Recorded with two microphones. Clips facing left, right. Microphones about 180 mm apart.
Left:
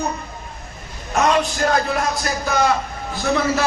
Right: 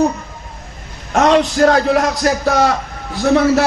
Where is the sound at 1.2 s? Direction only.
80° right.